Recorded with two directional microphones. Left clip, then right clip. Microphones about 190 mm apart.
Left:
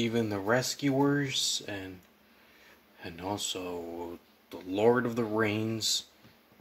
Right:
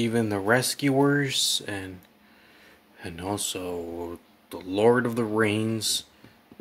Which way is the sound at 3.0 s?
20° right (ahead or behind).